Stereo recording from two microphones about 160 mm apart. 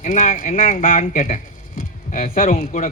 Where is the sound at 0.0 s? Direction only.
50° left (ahead or behind).